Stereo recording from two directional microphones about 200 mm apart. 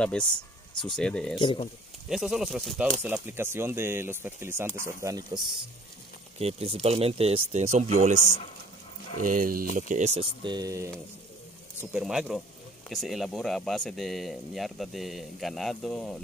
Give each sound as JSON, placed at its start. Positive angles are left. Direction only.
{"t": 0.0, "sound": "speech", "side_deg": 5}
{"t": 8.2, "sound": "speech", "side_deg": 40}
{"t": 9.2, "sound": "speech", "side_deg": -45}
{"t": 10.4, "sound": "speech", "side_deg": -20}
{"t": 11.9, "sound": "speech", "side_deg": -5}